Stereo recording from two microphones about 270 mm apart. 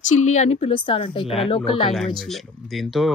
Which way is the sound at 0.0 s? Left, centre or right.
Left.